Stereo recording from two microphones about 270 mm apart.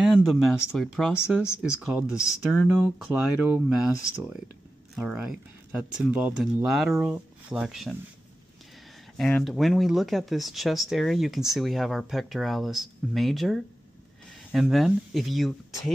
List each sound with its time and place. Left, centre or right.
0.0 s speech: centre
1.9 s speech: centre
4.9 s speech: centre
9.1 s speech: centre